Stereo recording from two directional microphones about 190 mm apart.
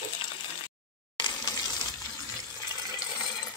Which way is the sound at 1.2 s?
20° left (ahead or behind).